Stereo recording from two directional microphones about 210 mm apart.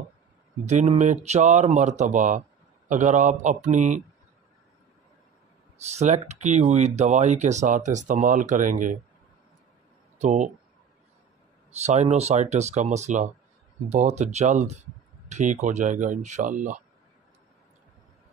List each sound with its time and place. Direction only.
0.7 s speech: 35° right (ahead or behind)
5.8 s speech: 30° right (ahead or behind)
10.1 s speech: 35° right (ahead or behind)
11.7 s speech: 30° right (ahead or behind)